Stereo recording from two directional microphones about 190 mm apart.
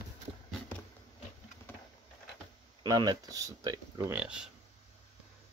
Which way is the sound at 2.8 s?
20° right (ahead or behind).